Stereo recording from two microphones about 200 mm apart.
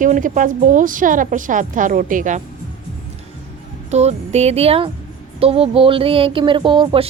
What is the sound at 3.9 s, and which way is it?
Speech, 35° right (ahead or behind).